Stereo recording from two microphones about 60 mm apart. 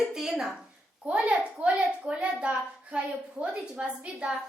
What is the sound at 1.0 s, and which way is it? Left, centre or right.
A child's voice, right.